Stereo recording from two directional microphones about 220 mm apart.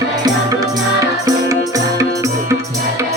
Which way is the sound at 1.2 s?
15° right (ahead or behind).